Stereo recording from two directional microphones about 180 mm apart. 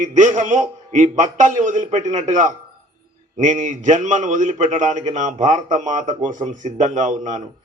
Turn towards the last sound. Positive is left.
turn(degrees=-45)  # may be behind; listen again after turning